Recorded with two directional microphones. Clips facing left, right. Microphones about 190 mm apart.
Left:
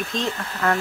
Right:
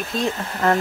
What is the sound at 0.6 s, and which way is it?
Speech, 30° right (ahead or behind).